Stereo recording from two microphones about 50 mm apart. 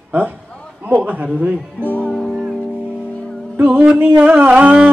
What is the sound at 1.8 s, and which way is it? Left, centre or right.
Music, left.